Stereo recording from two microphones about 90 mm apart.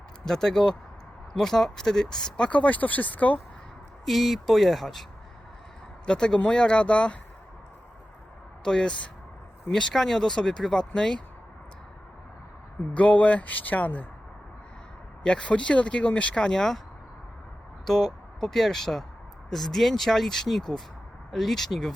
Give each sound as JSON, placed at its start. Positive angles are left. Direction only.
{"t": 0.3, "sound": "speech", "side_deg": 5}
{"t": 4.0, "sound": "speech", "side_deg": 0}
{"t": 6.1, "sound": "speech", "side_deg": 10}
{"t": 8.6, "sound": "speech", "side_deg": 10}
{"t": 12.9, "sound": "speech", "side_deg": 15}
{"t": 15.2, "sound": "speech", "side_deg": 10}
{"t": 17.8, "sound": "speech", "side_deg": 5}